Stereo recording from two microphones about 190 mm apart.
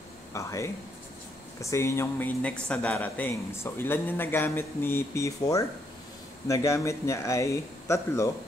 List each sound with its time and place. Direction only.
0.3 s speech: 15° left (ahead or behind)